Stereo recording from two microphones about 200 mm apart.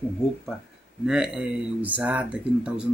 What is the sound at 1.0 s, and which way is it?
Speech, 5° right (ahead or behind).